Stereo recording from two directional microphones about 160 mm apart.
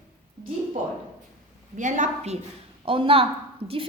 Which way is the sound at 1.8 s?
50° right (ahead or behind).